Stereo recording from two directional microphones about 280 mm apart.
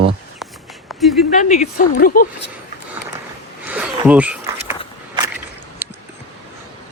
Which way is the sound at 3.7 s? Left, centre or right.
Centre.